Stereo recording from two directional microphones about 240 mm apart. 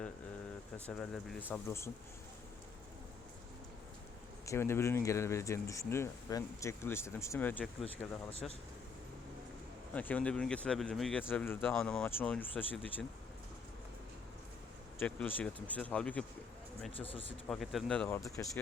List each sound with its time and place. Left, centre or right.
0.9 s speech: centre
4.4 s speech: centre
9.9 s speech: centre
14.9 s speech: centre
17.0 s speech: left
17.5 s speech: centre